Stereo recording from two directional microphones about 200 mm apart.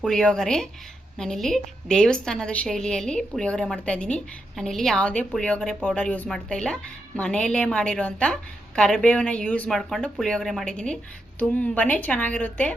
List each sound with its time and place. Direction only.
0.0 s a woman's voice: 5° left (ahead or behind)